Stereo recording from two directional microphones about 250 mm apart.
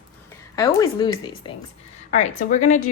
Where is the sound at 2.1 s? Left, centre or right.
Left.